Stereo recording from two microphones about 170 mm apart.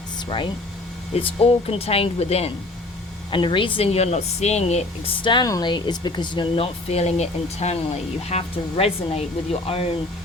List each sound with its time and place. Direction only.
0.3 s speech: 30° left (ahead or behind)